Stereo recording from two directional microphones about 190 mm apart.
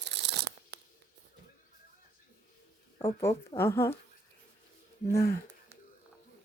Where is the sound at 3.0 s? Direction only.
15° left (ahead or behind).